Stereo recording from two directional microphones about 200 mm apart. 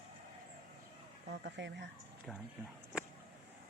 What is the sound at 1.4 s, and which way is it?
Speech, 60° right (ahead or behind).